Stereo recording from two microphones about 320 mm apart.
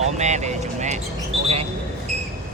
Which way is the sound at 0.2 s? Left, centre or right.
Right.